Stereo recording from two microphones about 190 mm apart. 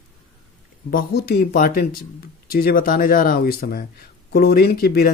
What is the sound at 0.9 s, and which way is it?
Speech, 50° left (ahead or behind).